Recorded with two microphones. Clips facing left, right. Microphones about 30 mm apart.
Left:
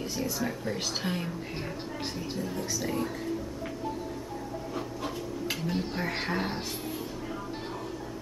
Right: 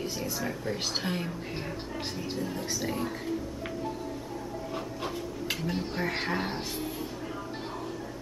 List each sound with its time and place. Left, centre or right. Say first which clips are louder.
0.0 s a woman's voice: left 1 dB; centre
0.7 s a woman's voice: even; centre
2.6 s speech: even; centre
5.5 s a woman's voice: even; centre